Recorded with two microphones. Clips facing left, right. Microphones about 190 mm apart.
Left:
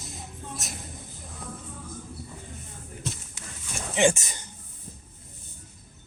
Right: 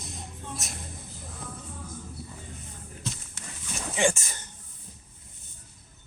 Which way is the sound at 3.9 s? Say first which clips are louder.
Left 4 dB; 20° left (ahead or behind).